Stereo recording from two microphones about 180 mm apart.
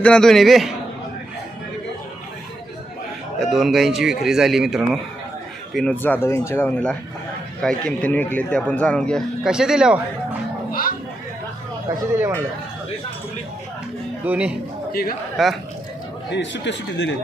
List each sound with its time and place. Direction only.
0.0 s speech: 5° left (ahead or behind)
3.4 s speech: centre (ahead or behind)
10.7 s chatter: 50° left (ahead or behind)
11.9 s speech: 15° right (ahead or behind)
14.3 s speech: 10° right (ahead or behind)
16.3 s speech: 85° left